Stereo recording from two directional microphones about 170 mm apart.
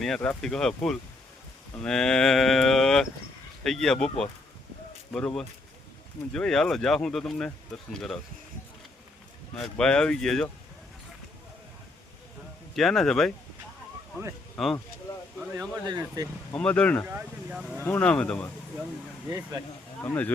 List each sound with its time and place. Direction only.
0.0 s speech: 5° left (ahead or behind)
5.1 s speech: 5° left (ahead or behind)
9.6 s speech: 5° left (ahead or behind)
12.7 s speech: centre (ahead or behind)
14.6 s speech: centre (ahead or behind)
15.9 s speech: 25° right (ahead or behind)
16.5 s speech: 5° left (ahead or behind)
17.1 s speech: 10° right (ahead or behind)
17.8 s speech: 5° left (ahead or behind)
20.0 s speech: 10° left (ahead or behind)